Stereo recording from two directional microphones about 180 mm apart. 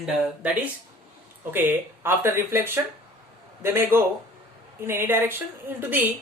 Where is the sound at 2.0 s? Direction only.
15° right (ahead or behind).